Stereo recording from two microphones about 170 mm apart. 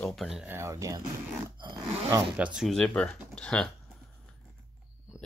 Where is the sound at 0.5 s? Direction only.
15° right (ahead or behind).